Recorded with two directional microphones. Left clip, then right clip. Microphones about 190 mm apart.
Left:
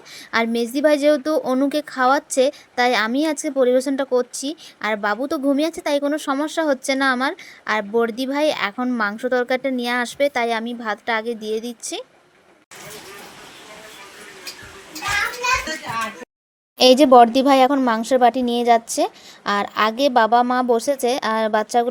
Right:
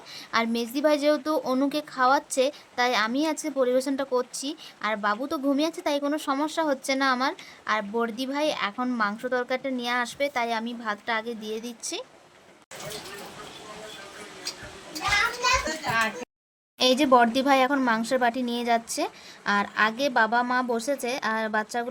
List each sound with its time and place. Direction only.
0.3 s speech: 20° left (ahead or behind)
15.7 s a sound: centre (ahead or behind)
16.7 s speech: 30° left (ahead or behind)